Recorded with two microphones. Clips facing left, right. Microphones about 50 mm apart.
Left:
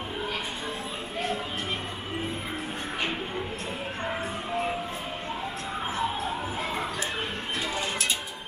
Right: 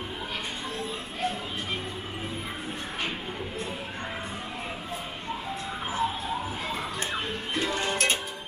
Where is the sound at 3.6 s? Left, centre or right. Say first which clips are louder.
Left 3 dB; centre.